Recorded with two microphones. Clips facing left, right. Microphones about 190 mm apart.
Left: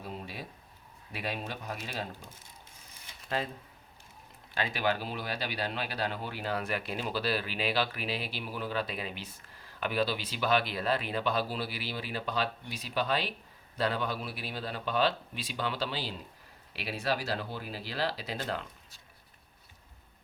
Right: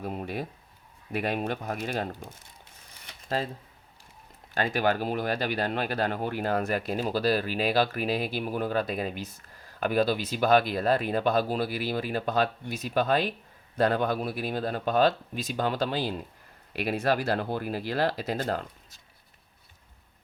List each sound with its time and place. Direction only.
0.0 s speech: 55° right (ahead or behind)
3.2 s speech: 35° right (ahead or behind)
4.5 s speech: 45° right (ahead or behind)